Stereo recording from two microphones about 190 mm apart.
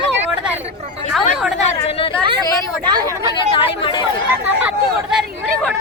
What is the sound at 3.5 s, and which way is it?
Speech, 25° left (ahead or behind).